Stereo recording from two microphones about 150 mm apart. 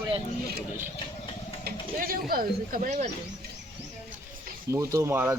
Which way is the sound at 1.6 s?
80° right.